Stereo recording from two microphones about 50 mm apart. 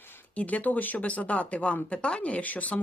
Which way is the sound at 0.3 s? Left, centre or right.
Left.